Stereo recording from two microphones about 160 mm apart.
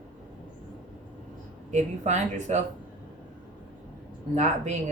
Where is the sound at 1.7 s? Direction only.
45° right (ahead or behind).